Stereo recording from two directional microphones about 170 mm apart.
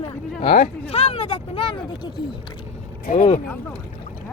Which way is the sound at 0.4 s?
35° left (ahead or behind).